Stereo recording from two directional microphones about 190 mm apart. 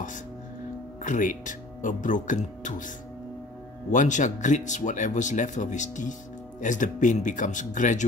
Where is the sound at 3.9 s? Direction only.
40° left (ahead or behind).